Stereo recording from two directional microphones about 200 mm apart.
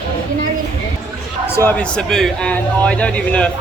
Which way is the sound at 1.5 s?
10° left (ahead or behind).